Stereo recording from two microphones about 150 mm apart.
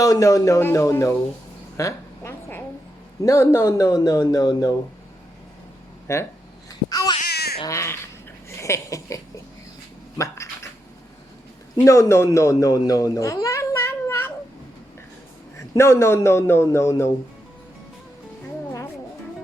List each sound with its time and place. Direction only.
0.0 s speech: 20° left (ahead or behind)
1.7 s a sound: 20° left (ahead or behind)
3.2 s speech: 20° left (ahead or behind)
6.1 s speech: 20° left (ahead or behind)
6.7 s babbling: 25° left (ahead or behind)
7.3 s baby cry: 90° left
7.6 s speech: 20° left (ahead or behind)
8.4 s a sound: 20° left (ahead or behind)
10.2 s speech: 20° left (ahead or behind)
11.9 s speech: 20° left (ahead or behind)
12.9 s a sound: 20° left (ahead or behind)
15.5 s a man's voice: 20° left (ahead or behind)